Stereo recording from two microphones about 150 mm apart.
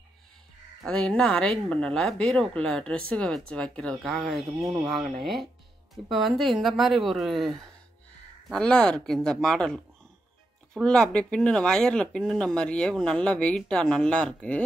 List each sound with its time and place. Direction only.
0.8 s speech: 5° left (ahead or behind)